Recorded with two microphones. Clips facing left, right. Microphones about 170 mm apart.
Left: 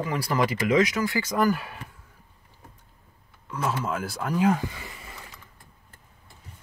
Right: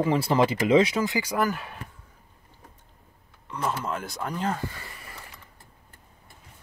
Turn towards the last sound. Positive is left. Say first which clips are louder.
# left 1 dB
turn(degrees=15)  # may be behind; listen again after turning